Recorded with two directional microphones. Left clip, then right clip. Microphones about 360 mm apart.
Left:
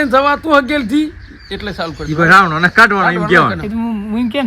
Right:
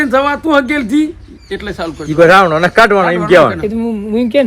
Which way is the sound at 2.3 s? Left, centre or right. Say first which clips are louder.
Left 1 dB; centre.